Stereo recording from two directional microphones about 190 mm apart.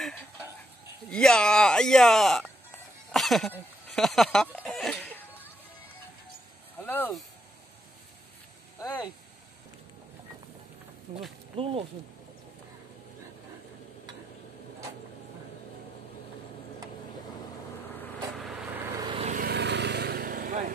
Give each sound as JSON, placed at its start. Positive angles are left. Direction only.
{"t": 1.1, "sound": "speech", "side_deg": 5}
{"t": 3.1, "sound": "a sound", "side_deg": 0}
{"t": 3.9, "sound": "speech", "side_deg": 0}
{"t": 6.8, "sound": "speech", "side_deg": 10}
{"t": 8.7, "sound": "speech", "side_deg": 20}
{"t": 11.1, "sound": "speech", "side_deg": -35}
{"t": 18.4, "sound": "vehicle", "side_deg": -5}
{"t": 19.0, "sound": "vehicle", "side_deg": -30}
{"t": 19.3, "sound": "vehicle", "side_deg": -55}